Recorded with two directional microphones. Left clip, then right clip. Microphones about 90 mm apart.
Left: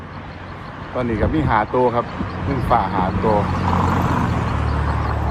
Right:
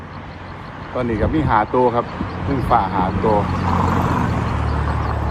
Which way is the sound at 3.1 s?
35° left (ahead or behind).